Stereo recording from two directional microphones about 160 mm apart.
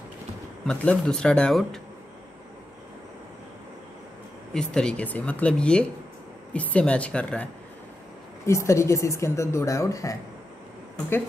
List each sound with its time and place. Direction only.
0.7 s speech: 5° left (ahead or behind)
4.6 s speech: 5° left (ahead or behind)
8.5 s a woman's voice: 20° left (ahead or behind)